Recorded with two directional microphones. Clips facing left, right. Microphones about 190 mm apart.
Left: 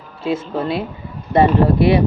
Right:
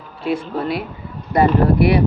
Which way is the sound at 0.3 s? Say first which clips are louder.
Left 1 dB; 25° left (ahead or behind).